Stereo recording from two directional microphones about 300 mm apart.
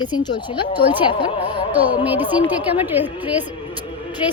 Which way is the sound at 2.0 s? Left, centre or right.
Centre.